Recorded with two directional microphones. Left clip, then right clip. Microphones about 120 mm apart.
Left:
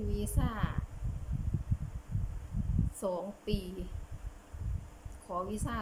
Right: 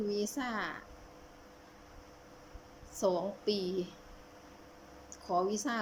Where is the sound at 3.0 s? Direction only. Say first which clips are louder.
Right 5 dB; 5° left (ahead or behind).